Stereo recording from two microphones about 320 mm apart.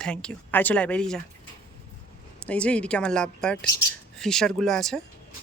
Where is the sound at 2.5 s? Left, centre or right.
Centre.